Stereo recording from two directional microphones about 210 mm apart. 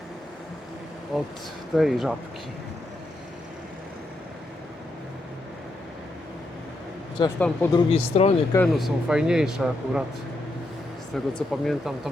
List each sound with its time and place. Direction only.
1.1 s speech: centre (ahead or behind)
7.3 s speech: 10° left (ahead or behind)
7.9 s speech: 30° left (ahead or behind)
8.5 s speech: centre (ahead or behind)
11.1 s speech: centre (ahead or behind)